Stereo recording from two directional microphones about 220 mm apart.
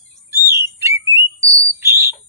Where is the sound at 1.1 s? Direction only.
10° right (ahead or behind).